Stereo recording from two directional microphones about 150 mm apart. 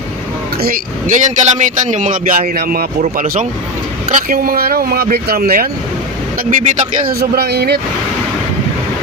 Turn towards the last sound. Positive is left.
turn(degrees=-90)